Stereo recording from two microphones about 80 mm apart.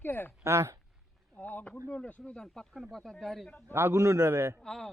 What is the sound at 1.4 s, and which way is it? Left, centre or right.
Speech, centre.